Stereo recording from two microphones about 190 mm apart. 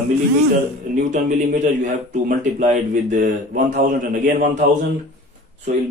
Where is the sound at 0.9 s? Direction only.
40° right (ahead or behind).